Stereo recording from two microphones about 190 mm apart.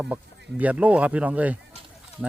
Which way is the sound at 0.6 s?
5° right (ahead or behind).